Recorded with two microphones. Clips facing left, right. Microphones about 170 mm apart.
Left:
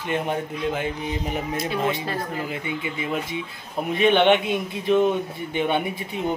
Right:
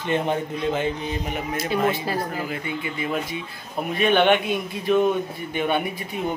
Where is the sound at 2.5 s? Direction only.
15° left (ahead or behind).